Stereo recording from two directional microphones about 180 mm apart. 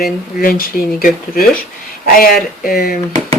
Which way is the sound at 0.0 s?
55° left (ahead or behind).